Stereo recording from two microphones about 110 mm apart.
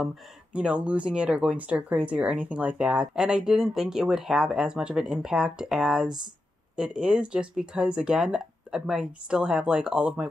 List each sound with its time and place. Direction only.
0.0 s speech: 5° right (ahead or behind)